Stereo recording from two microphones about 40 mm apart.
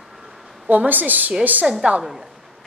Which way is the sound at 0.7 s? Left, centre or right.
Right.